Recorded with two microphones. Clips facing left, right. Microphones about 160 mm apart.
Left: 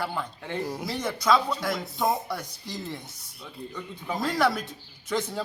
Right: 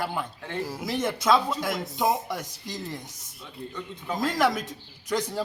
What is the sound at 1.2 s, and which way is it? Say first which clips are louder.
Speech: even; 20° right (ahead or behind).